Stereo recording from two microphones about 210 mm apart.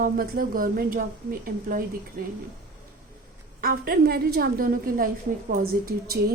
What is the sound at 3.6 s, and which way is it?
A woman's voice, 45° right (ahead or behind).